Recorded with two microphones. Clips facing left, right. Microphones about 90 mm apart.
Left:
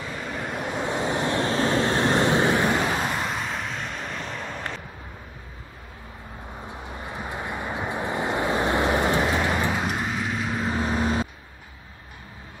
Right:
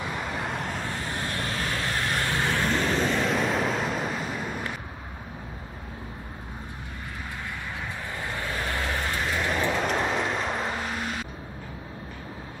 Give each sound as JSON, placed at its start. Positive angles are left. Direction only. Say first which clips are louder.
{"t": 0.4, "sound": "vehicle", "louder": "left 1 dB", "side_deg": 5}
{"t": 0.7, "sound": "vehicle", "louder": "left 7 dB", "side_deg": 20}
{"t": 7.1, "sound": "vehicle", "louder": "left 5 dB", "side_deg": 25}
{"t": 9.5, "sound": "vehicle", "louder": "left 1 dB", "side_deg": 10}
{"t": 10.8, "sound": "vehicle", "louder": "left 7 dB", "side_deg": 35}